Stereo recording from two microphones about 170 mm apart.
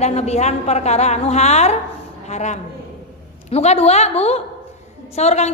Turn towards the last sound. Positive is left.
turn(degrees=40)  # may be behind; listen again after turning